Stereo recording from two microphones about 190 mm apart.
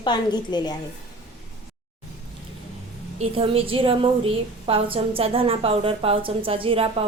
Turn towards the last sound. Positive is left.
turn(degrees=-30)  # may be behind; listen again after turning